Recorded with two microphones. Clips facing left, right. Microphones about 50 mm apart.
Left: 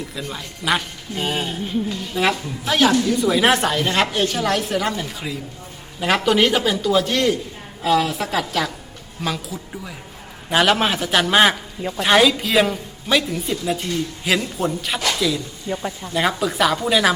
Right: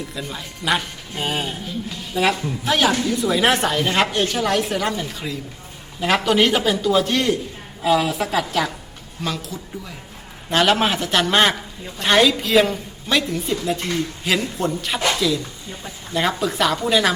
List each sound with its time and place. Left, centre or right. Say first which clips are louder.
0.1 s a woman's voice: even; centre
15.7 s speech: left 9 dB; left
16.1 s a woman's voice: even; centre